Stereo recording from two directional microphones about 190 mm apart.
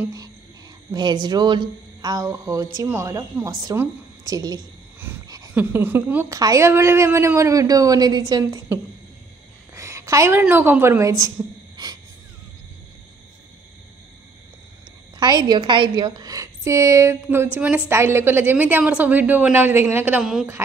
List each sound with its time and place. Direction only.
0.9 s a woman's voice: 20° right (ahead or behind)
5.0 s a sound: 20° right (ahead or behind)
5.5 s a woman's voice: 10° right (ahead or behind)
9.8 s a sound: 15° right (ahead or behind)
10.4 s a woman's voice: 10° right (ahead or behind)
15.1 s a woman's voice: 20° right (ahead or behind)